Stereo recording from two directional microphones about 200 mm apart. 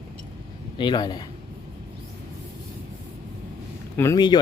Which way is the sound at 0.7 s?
20° left (ahead or behind).